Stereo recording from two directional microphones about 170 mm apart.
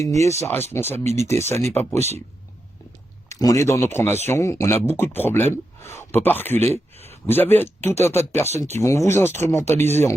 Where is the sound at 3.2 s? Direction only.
20° left (ahead or behind).